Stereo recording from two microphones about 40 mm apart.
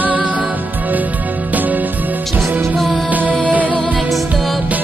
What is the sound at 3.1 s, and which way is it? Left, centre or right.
Music, right.